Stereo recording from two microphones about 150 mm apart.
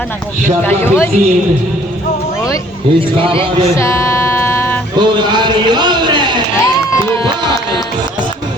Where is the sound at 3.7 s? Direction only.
20° left (ahead or behind).